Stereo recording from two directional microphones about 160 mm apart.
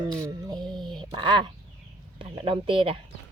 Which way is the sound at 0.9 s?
30° right (ahead or behind).